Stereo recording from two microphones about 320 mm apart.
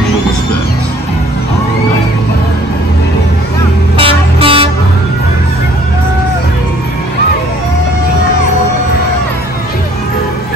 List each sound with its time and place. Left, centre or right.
4.0 s vehicle: centre